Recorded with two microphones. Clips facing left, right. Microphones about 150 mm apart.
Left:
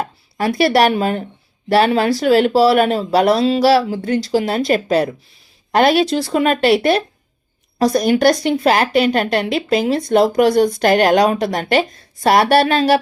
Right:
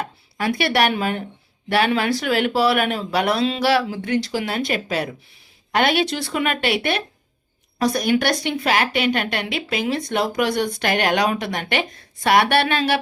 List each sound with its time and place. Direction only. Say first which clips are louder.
0.0 s a woman's voice: left 5 dB; 40° left (ahead or behind)